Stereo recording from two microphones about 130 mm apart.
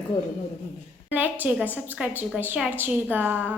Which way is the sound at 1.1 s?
15° right (ahead or behind).